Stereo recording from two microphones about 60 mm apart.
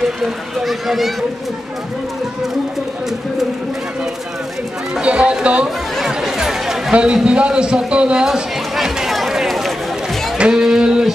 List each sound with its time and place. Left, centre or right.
0.2 s speech: centre
5.0 s run: centre
5.9 s a man's voice: centre
8.7 s run: centre
10.3 s music: centre